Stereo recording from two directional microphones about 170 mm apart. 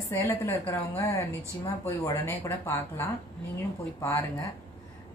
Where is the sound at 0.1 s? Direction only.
15° left (ahead or behind).